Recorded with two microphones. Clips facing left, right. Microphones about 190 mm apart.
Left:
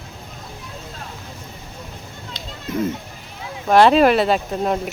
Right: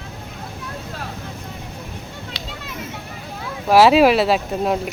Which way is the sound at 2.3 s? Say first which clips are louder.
Left 10 dB; 70° right (ahead or behind).